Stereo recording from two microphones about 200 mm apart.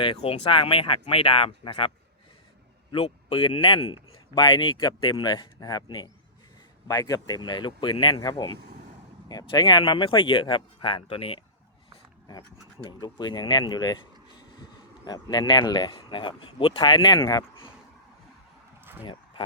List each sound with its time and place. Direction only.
0.0 s speech: 25° left (ahead or behind)
2.9 s speech: 30° left (ahead or behind)
12.8 s speech: 20° left (ahead or behind)